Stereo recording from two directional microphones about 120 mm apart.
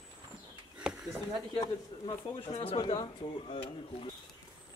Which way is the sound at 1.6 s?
35° left (ahead or behind).